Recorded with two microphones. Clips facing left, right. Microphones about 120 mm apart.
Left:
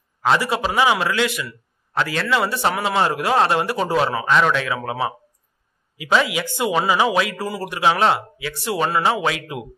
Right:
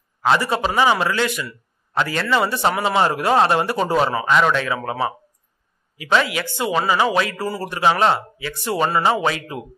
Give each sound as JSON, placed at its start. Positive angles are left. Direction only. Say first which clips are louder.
{"t": 0.2, "sound": "speech", "louder": "right 1 dB", "side_deg": 0}
{"t": 6.2, "sound": "speech", "louder": "left 1 dB", "side_deg": 15}